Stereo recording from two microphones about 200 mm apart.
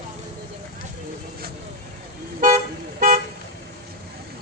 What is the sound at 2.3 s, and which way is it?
Toot, 40° right (ahead or behind).